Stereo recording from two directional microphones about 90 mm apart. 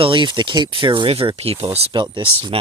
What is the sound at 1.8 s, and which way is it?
Speech, 60° right (ahead or behind).